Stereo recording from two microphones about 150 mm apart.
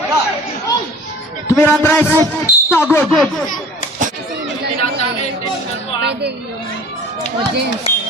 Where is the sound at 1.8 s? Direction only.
15° left (ahead or behind).